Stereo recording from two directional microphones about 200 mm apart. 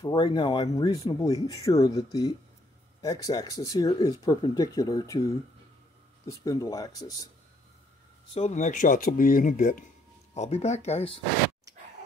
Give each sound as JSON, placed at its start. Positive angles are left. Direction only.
{"t": 0.0, "sound": "speech", "side_deg": 20}
{"t": 8.4, "sound": "speech", "side_deg": 35}